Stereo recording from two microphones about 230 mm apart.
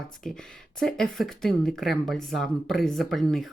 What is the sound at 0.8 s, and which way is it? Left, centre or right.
A woman's voice, centre.